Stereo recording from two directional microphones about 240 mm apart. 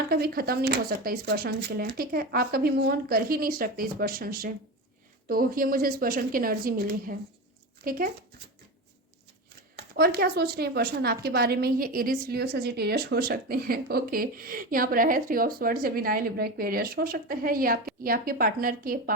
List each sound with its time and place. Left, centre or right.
0.1 s a woman's voice: right
9.7 s a woman's voice: right